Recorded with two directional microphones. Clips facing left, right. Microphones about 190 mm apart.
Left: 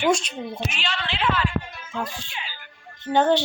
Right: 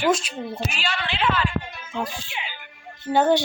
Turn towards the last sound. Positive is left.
turn(degrees=-10)  # may be behind; listen again after turning